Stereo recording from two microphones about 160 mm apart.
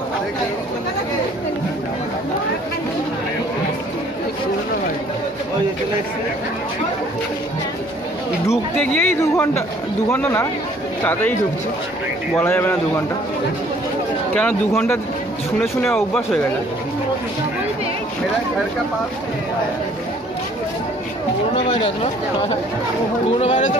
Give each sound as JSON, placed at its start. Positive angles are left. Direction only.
{"t": 8.5, "sound": "speech", "side_deg": 10}
{"t": 12.4, "sound": "speech", "side_deg": 15}
{"t": 14.3, "sound": "speech", "side_deg": 10}
{"t": 21.5, "sound": "speech", "side_deg": 35}
{"t": 23.4, "sound": "speech", "side_deg": 40}